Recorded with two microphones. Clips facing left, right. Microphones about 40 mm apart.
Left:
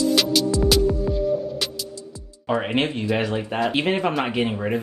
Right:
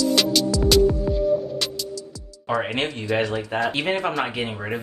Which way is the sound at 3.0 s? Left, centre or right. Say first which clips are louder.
Even; centre.